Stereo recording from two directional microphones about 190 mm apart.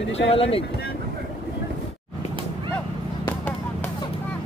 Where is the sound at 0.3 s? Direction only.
30° left (ahead or behind).